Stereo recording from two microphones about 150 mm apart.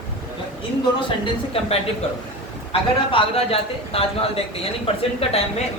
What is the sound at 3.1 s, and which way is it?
Speech, 40° left (ahead or behind).